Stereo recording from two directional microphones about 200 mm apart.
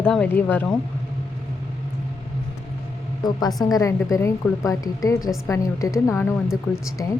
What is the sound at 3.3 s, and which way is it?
A woman's voice, 20° left (ahead or behind).